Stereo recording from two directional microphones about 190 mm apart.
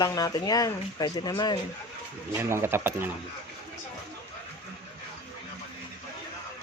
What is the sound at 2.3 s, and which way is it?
Speech, 10° right (ahead or behind).